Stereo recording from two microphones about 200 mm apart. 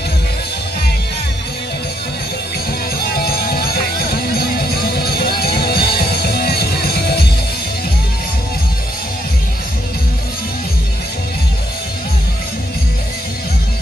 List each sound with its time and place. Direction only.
3.0 s music: 50° left (ahead or behind)